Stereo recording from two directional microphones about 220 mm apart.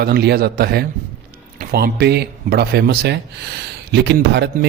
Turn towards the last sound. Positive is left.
turn(degrees=-50)  # may be behind; listen again after turning